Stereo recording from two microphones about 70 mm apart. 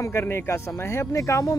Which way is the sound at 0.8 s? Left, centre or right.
Left.